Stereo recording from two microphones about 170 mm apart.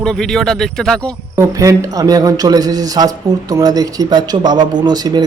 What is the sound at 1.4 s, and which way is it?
A man's voice, 20° right (ahead or behind).